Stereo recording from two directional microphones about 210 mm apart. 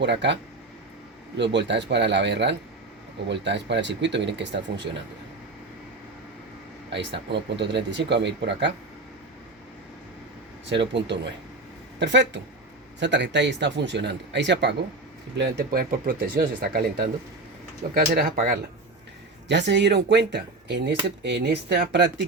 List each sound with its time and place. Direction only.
0.0 s speech: 55° right (ahead or behind)
1.4 s speech: 55° right (ahead or behind)
6.9 s speech: 55° right (ahead or behind)
10.7 s speech: 55° right (ahead or behind)
17.9 s speech: 45° right (ahead or behind)
19.5 s speech: 55° right (ahead or behind)